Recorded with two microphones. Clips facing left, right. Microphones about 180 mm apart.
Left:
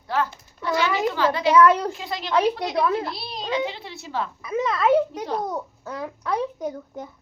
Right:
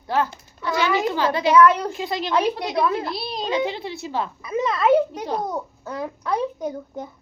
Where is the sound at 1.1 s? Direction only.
15° right (ahead or behind).